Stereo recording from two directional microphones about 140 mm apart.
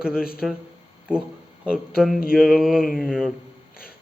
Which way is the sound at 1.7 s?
5° right (ahead or behind).